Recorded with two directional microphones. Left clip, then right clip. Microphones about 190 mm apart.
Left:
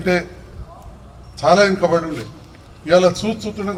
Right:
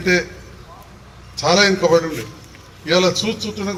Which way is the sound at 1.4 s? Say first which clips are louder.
Left 1 dB; 60° left (ahead or behind).